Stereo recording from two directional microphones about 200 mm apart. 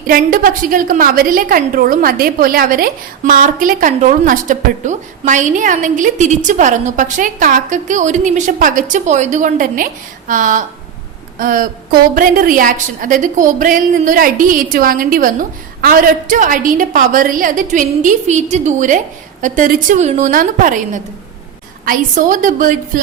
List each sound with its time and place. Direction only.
0.1 s a woman's voice: 45° right (ahead or behind)